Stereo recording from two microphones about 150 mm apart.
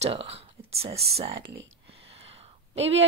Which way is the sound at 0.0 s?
40° right (ahead or behind).